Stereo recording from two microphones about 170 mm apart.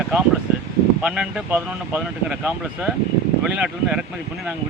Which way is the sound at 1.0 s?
5° right (ahead or behind).